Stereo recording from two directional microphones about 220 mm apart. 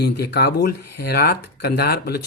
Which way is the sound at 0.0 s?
45° left (ahead or behind).